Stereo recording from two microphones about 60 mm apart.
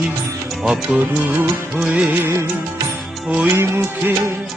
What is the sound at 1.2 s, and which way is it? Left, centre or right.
Music of bollywood, right.